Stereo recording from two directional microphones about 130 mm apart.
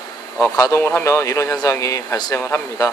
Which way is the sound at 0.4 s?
25° left (ahead or behind).